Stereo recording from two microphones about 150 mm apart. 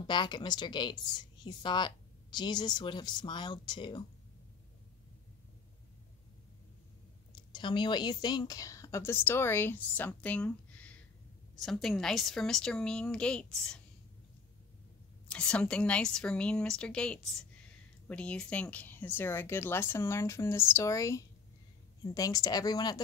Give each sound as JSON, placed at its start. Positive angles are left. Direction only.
{"t": 0.0, "sound": "speech", "side_deg": 30}
{"t": 7.3, "sound": "a woman's voice", "side_deg": 30}
{"t": 15.2, "sound": "a woman's voice", "side_deg": 5}